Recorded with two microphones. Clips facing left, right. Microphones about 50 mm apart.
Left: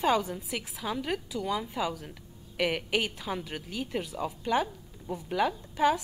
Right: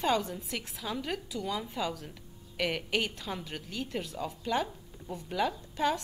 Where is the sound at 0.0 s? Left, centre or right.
Centre.